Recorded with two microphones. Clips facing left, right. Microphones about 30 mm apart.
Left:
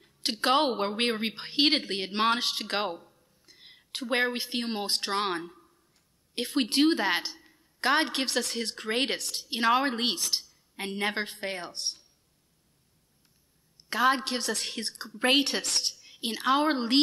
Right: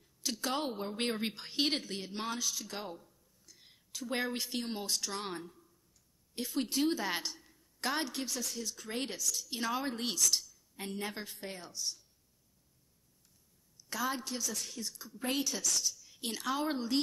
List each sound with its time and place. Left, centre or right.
0.0 s a woman's voice: left
0.9 s speech: left
4.3 s a woman's voice: left
4.6 s a woman's voice: left
7.1 s a woman's voice: left
7.3 s a sound: left
7.9 s a woman's voice: left
10.1 s a woman's voice: left
10.5 s speech: left
13.7 s a woman's voice: left
16.2 s a woman's voice: left
16.5 s a woman's voice: left